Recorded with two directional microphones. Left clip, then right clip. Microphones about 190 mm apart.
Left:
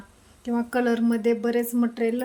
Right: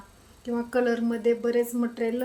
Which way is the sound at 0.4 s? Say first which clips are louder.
Left 1 dB; 45° left (ahead or behind).